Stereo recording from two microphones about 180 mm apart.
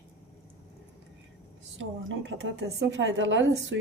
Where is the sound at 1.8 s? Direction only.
90° right.